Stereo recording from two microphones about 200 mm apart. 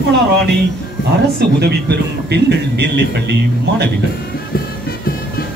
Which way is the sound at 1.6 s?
55° right (ahead or behind).